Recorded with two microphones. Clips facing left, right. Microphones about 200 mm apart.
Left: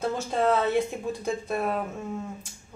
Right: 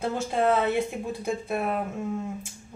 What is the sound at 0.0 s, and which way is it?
Speech, 10° right (ahead or behind).